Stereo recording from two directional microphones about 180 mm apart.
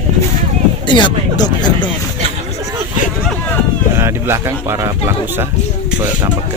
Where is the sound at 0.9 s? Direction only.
25° left (ahead or behind).